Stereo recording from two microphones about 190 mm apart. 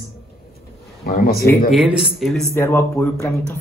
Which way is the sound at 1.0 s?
50° left (ahead or behind).